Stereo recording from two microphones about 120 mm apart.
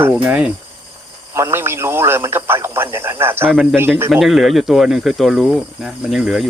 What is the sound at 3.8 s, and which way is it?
Speech, 20° right (ahead or behind).